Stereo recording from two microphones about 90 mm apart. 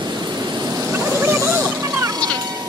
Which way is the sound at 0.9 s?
25° right (ahead or behind).